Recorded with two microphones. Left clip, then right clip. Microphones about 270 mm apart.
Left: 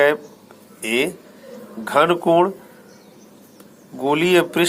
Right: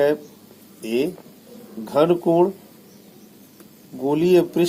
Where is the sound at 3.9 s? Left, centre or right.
Left.